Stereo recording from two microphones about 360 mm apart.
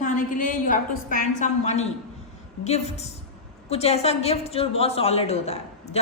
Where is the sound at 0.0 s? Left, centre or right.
Left.